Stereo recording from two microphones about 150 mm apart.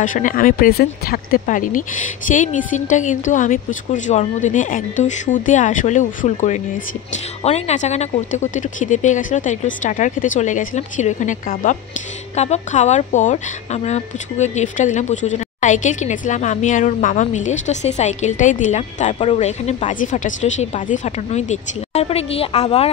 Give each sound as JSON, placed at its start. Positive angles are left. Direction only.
{"t": 0.0, "sound": "speech", "side_deg": 60}